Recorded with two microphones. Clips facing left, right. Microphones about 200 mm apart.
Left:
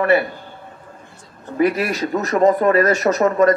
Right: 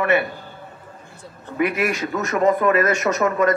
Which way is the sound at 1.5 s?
35° left (ahead or behind).